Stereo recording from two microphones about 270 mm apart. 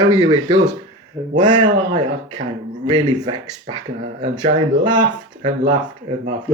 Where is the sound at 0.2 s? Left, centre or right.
Centre.